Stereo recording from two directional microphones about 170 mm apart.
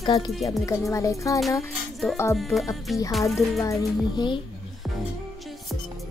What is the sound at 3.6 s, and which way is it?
Speech, 20° left (ahead or behind).